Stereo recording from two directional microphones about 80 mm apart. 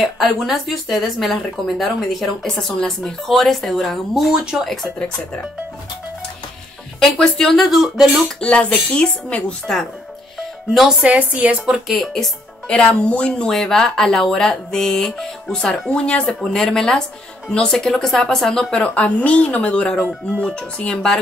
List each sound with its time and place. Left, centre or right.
0.0 s speech: centre
4.6 s speech: centre
7.0 s speech: centre
7.6 s speech: centre
8.4 s speech: centre
10.7 s speech: centre
11.0 s a woman's voice: centre
12.1 s speech: centre